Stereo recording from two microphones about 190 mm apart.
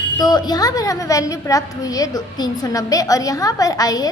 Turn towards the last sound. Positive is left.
turn(degrees=20)  # may be behind; listen again after turning